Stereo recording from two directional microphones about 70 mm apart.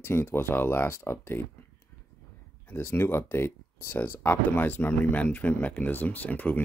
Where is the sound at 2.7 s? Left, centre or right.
Left.